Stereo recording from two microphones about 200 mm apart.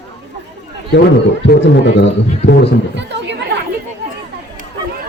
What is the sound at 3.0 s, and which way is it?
Speech, 60° right (ahead or behind).